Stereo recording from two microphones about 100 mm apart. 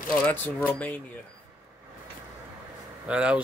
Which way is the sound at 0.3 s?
20° left (ahead or behind).